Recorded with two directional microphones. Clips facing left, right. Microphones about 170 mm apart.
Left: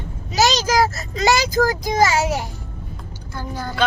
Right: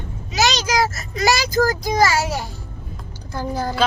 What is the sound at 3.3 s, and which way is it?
Speech, 35° right (ahead or behind).